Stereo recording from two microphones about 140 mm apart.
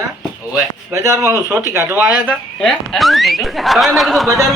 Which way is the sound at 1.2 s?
20° right (ahead or behind).